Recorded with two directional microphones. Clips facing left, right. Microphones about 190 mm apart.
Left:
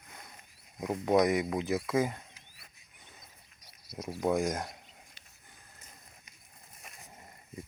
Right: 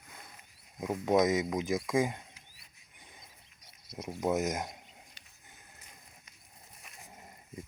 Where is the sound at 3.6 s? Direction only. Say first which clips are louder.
Left 1 dB; 25° right (ahead or behind).